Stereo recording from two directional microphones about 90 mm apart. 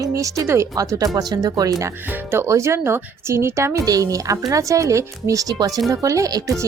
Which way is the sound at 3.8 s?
40° right (ahead or behind).